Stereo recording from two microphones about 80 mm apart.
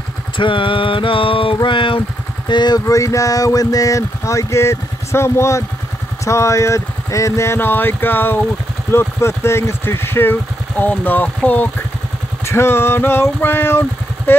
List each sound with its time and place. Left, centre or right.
0.4 s music: left
2.4 s speech: left
2.9 s speech: left
12.4 s speech: left